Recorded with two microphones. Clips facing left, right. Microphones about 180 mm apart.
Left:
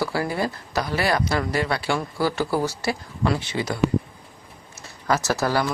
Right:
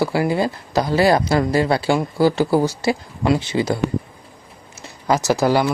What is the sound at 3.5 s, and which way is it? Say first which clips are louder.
Speech: right 7 dB; 30° right (ahead or behind).